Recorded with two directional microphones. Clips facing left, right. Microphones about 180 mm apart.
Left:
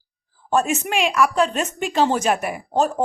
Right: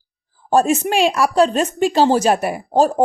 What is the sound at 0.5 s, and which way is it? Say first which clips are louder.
Speech: right 5 dB; 35° right (ahead or behind).